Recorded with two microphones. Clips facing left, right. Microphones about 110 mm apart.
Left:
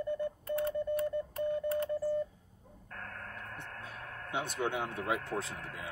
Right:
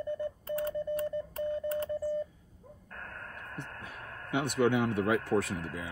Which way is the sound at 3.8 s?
60° right (ahead or behind).